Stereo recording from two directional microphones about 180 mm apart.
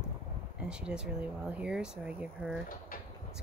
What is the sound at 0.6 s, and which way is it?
Speech, 5° right (ahead or behind).